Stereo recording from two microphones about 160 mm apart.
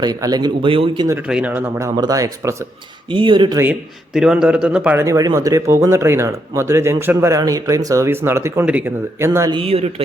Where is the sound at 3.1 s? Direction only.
30° right (ahead or behind).